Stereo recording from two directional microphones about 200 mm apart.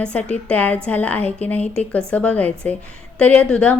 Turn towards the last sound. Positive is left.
turn(degrees=5)  # may be behind; listen again after turning